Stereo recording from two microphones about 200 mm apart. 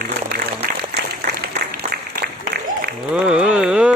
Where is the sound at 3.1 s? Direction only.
5° right (ahead or behind).